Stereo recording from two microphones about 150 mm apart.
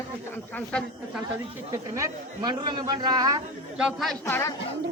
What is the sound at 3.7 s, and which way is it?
Speech, centre (ahead or behind).